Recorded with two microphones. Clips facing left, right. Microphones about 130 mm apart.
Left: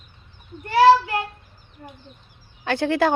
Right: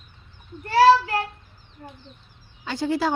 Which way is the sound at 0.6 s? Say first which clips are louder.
Left 1 dB; 20° left (ahead or behind).